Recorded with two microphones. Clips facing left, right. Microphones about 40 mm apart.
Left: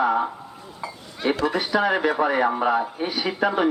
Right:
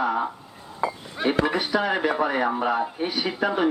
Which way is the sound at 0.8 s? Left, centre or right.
Right.